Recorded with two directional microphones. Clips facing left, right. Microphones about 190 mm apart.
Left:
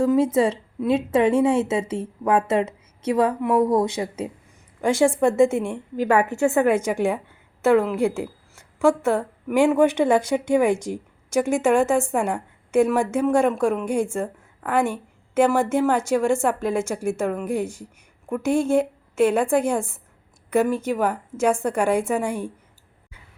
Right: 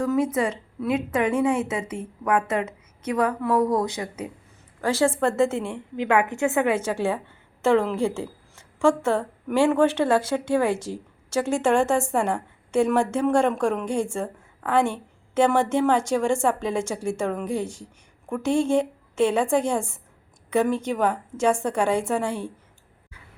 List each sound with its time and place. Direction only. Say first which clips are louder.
0.0 s a woman's voice: left 4 dB; 25° left (ahead or behind)
6.3 s a woman's voice: left 3 dB; 20° right (ahead or behind)
6.7 s a woman's voice: left 3 dB; 15° left (ahead or behind)